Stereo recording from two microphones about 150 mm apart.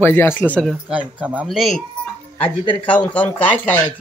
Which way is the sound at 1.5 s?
Centre (ahead or behind).